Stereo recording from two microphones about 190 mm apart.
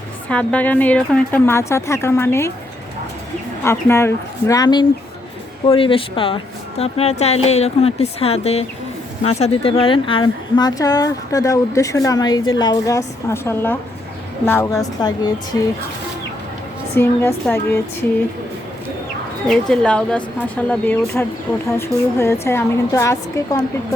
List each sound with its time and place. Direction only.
0.3 s a woman's voice: 5° left (ahead or behind)
3.6 s a woman's voice: 15° left (ahead or behind)
17.0 s a woman's voice: 10° left (ahead or behind)
19.5 s a woman's voice: 5° left (ahead or behind)